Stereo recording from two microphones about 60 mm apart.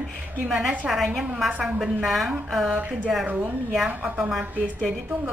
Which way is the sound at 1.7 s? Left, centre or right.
Centre.